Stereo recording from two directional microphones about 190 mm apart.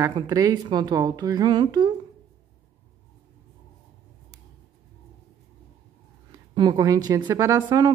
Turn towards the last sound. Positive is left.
turn(degrees=-20)  # may be behind; listen again after turning